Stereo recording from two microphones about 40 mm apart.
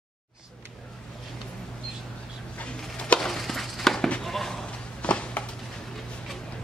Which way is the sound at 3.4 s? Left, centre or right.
Centre.